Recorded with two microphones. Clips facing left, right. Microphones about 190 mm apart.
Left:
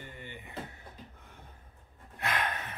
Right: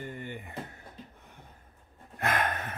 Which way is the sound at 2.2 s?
50° right (ahead or behind).